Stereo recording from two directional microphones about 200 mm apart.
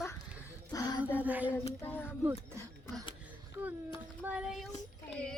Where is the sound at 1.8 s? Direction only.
10° left (ahead or behind).